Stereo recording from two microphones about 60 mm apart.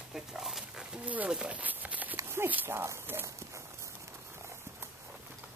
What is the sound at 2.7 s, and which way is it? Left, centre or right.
Speech, right.